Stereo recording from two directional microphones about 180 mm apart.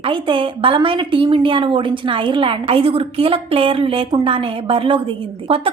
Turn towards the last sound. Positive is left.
turn(degrees=-30)  # may be behind; listen again after turning